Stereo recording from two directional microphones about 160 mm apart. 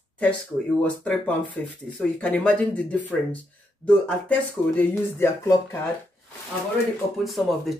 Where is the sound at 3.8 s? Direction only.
5° left (ahead or behind).